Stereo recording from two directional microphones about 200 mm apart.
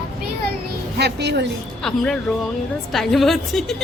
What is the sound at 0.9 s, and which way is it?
Speech, 55° right (ahead or behind).